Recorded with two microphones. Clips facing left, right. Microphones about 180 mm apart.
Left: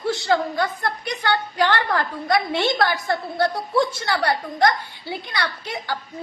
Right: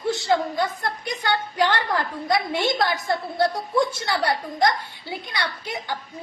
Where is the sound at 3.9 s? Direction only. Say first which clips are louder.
Left 1 dB; 25° right (ahead or behind).